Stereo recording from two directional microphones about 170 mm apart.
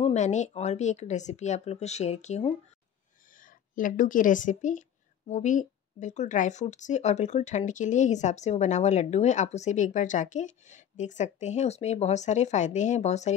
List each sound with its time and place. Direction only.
0.0 s speech: 45° left (ahead or behind)
3.3 s speech: 55° left (ahead or behind)